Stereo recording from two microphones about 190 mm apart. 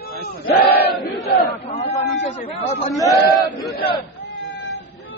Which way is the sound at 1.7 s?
35° left (ahead or behind).